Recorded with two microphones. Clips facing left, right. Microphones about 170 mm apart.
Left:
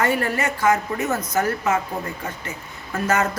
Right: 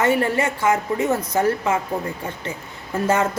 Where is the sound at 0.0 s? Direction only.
25° right (ahead or behind).